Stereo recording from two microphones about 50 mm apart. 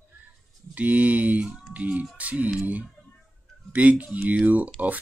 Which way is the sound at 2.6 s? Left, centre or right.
Right.